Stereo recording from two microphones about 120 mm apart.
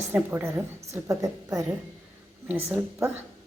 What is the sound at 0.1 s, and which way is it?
A woman's voice, 15° right (ahead or behind).